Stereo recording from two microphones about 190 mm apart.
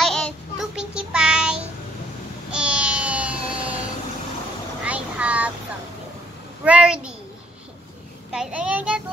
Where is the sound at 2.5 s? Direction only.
5° right (ahead or behind).